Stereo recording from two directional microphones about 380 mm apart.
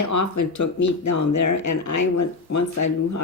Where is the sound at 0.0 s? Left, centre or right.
Left.